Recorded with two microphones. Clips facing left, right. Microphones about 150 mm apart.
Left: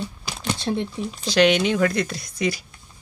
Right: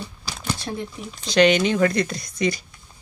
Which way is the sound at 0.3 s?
20° left (ahead or behind).